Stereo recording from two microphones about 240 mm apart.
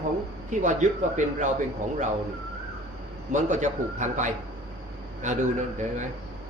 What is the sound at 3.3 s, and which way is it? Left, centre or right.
A man's voice, right.